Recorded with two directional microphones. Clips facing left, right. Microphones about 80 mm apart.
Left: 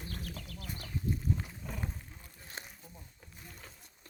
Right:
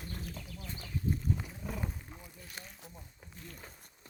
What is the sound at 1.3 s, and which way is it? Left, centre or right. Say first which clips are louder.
Wild animals: right 2 dB; centre.